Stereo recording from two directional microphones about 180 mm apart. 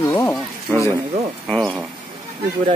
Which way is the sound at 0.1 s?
10° left (ahead or behind).